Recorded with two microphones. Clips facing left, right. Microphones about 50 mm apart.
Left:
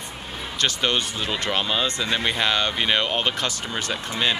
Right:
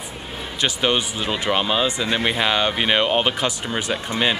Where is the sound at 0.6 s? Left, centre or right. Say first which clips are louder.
Right 2 dB; centre.